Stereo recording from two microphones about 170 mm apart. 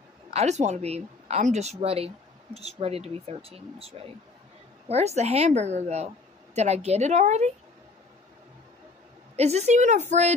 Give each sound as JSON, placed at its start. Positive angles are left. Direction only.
{"t": 0.3, "sound": "speech", "side_deg": -40}
{"t": 9.4, "sound": "speech", "side_deg": -40}